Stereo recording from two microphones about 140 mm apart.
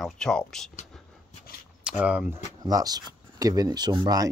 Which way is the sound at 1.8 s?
10° right (ahead or behind).